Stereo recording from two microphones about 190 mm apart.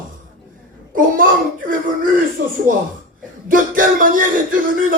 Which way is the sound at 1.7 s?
45° right (ahead or behind).